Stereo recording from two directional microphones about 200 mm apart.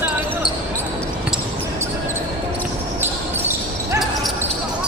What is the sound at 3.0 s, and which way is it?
Basketball bounce, 10° right (ahead or behind).